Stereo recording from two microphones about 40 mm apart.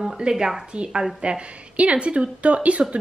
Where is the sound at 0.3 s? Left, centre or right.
Centre.